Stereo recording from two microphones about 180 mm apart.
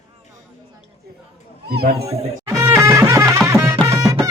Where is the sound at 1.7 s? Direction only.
60° right (ahead or behind).